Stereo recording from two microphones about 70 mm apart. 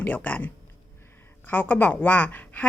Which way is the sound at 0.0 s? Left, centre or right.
Left.